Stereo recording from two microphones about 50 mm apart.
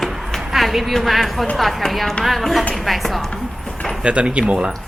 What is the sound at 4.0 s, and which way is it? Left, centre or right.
Speech, right.